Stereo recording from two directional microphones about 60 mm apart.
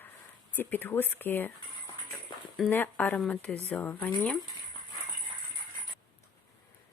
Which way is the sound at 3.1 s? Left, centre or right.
Centre.